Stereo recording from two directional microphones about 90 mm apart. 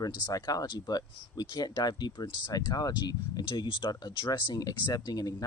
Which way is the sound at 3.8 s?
65° left (ahead or behind).